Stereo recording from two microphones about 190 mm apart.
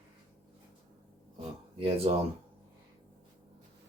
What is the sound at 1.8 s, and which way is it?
Speech, 30° right (ahead or behind).